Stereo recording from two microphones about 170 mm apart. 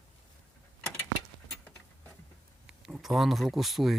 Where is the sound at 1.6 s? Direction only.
15° left (ahead or behind).